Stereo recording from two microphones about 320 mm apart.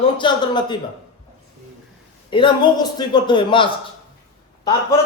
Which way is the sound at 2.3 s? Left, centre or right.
Centre.